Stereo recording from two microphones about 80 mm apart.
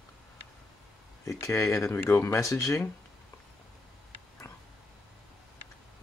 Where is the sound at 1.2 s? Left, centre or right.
Left.